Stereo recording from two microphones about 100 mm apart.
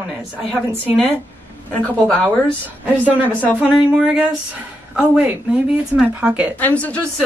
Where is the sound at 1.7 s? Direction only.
15° left (ahead or behind).